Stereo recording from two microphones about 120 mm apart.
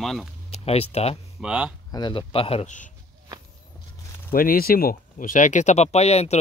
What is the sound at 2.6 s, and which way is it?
Speech, 90° left.